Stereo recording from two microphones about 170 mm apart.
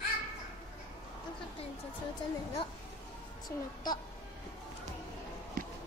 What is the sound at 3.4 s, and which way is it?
Speech, 25° left (ahead or behind).